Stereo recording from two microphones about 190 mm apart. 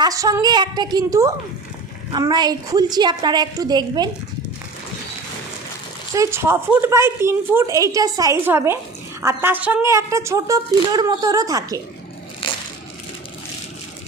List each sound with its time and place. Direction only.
0.0 s a woman's voice: 20° right (ahead or behind)
6.1 s a woman's voice: 15° right (ahead or behind)
12.4 s crushing: 25° left (ahead or behind)